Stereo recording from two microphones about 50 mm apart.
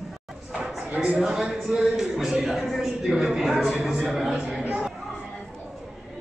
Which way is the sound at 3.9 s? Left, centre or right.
Centre.